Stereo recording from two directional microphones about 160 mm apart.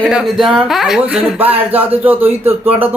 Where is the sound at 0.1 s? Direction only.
5° right (ahead or behind).